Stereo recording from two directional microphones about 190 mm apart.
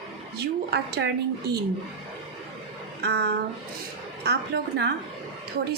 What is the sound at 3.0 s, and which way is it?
A woman's voice, 60° right (ahead or behind).